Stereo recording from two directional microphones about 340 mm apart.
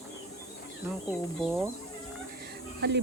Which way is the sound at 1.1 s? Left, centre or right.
Centre.